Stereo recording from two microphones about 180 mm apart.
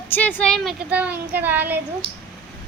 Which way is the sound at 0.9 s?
10° right (ahead or behind).